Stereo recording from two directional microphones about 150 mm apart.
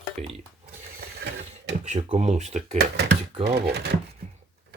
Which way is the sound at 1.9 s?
45° right (ahead or behind).